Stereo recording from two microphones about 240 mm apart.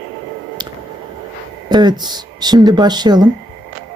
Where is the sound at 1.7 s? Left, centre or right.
Centre.